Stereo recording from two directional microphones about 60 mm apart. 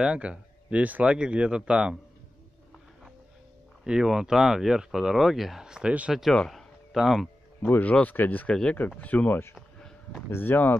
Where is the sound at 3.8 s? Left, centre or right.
Centre.